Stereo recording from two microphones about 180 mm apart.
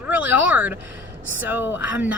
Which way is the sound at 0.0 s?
10° right (ahead or behind).